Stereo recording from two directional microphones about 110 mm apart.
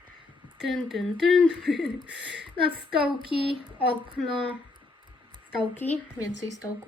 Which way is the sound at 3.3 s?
55° left (ahead or behind).